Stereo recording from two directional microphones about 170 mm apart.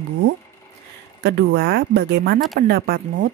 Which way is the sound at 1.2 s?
75° right (ahead or behind).